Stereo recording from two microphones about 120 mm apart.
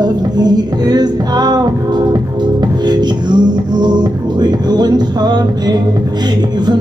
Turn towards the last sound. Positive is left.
turn(degrees=-35)  # may be behind; listen again after turning